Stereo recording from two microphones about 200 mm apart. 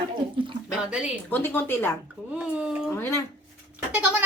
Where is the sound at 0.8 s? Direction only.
5° right (ahead or behind).